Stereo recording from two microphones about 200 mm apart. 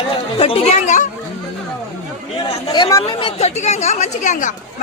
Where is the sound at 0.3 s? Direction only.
30° left (ahead or behind).